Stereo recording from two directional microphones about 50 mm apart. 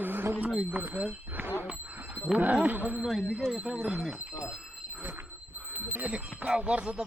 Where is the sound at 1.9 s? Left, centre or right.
Right.